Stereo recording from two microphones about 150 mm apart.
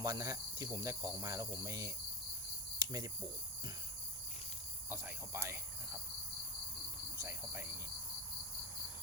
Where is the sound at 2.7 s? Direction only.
25° right (ahead or behind).